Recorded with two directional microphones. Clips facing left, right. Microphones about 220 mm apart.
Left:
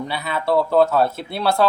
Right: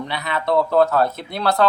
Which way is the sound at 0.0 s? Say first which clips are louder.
Even; 5° left (ahead or behind).